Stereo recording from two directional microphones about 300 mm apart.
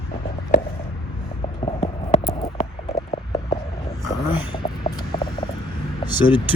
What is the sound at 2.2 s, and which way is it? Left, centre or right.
Hum, left.